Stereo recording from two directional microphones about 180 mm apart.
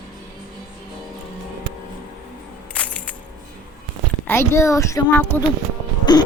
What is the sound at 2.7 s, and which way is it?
Music, 5° left (ahead or behind).